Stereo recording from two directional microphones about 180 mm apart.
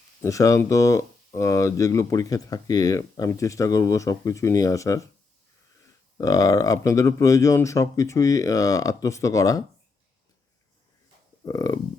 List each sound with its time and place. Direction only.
0.2 s speech: 15° left (ahead or behind)
6.1 s speech: 20° left (ahead or behind)
11.4 s speech: 20° left (ahead or behind)